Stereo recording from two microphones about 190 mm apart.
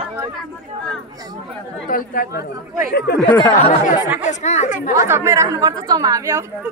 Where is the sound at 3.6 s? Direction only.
40° left (ahead or behind).